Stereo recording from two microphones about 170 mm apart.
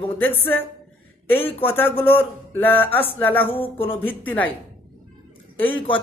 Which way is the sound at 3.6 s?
35° left (ahead or behind).